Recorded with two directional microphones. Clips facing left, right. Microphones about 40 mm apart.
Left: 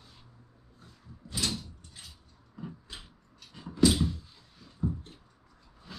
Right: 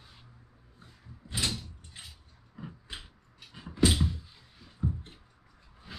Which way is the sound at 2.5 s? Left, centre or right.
Right.